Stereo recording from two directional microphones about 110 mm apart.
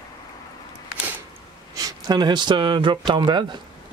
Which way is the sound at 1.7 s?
35° right (ahead or behind).